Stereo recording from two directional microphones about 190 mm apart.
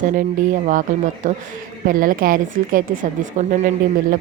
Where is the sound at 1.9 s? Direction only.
45° right (ahead or behind).